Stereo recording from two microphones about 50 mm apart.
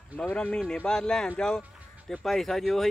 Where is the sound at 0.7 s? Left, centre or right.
Centre.